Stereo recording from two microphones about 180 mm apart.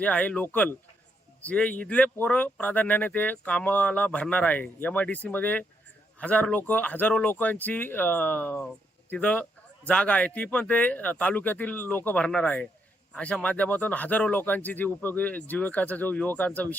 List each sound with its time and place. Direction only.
0.0 s speech: 5° left (ahead or behind)